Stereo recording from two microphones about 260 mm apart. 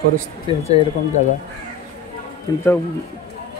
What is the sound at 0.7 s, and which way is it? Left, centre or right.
Speech, left.